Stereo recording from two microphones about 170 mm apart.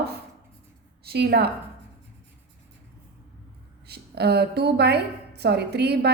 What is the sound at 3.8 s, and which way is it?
A woman's voice, 70° right (ahead or behind).